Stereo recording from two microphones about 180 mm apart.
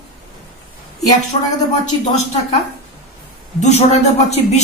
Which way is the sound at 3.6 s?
40° left (ahead or behind).